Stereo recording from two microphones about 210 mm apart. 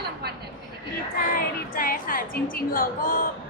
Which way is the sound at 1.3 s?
45° left (ahead or behind).